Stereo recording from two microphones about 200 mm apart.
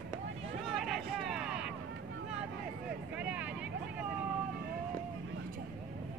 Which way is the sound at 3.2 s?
5° right (ahead or behind).